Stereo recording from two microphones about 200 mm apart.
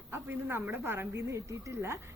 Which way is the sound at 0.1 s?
10° right (ahead or behind).